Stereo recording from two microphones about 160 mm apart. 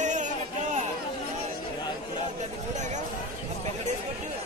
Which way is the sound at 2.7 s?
50° right (ahead or behind).